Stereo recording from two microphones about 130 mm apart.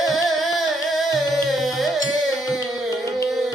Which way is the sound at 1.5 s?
Centre (ahead or behind).